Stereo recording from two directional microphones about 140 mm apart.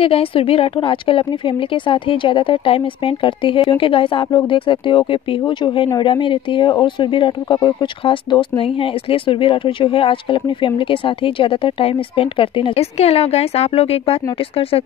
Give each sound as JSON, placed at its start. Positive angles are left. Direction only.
{"t": 0.0, "sound": "speech", "side_deg": 40}